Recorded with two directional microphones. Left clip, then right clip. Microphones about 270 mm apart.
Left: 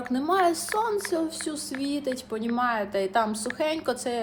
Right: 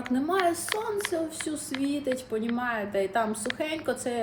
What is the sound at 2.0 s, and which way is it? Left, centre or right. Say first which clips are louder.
Speech: even; left.